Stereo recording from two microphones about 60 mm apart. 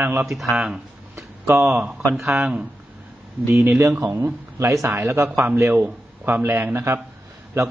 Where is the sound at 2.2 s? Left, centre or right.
Centre.